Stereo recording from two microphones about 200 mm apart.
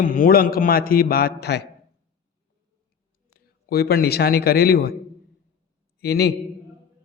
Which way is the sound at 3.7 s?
50° left (ahead or behind).